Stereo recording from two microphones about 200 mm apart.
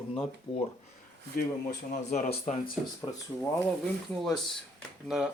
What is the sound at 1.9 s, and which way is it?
Speech, 35° left (ahead or behind).